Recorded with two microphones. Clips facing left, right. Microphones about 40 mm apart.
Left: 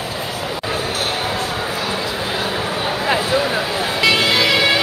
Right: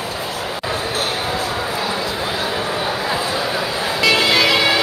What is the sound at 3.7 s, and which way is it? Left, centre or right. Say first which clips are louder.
Vehicle: left 1 dB; centre.